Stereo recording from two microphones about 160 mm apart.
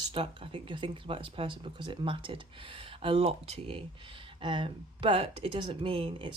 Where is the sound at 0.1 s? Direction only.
35° right (ahead or behind).